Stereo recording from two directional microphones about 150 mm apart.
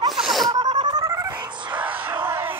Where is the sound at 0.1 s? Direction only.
Centre (ahead or behind).